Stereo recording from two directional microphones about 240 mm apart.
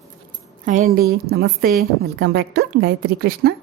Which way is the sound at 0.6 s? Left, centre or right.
Right.